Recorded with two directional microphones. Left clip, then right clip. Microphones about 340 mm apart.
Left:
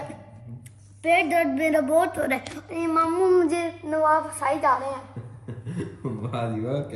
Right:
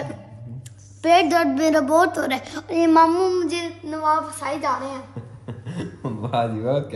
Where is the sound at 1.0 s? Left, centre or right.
Centre.